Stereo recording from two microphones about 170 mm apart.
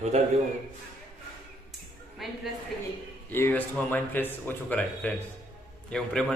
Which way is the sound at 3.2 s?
10° left (ahead or behind).